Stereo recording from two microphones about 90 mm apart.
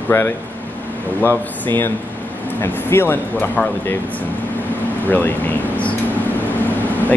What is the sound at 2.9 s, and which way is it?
Speech, 25° left (ahead or behind).